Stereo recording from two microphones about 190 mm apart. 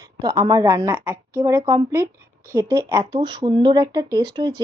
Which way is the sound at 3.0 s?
30° right (ahead or behind).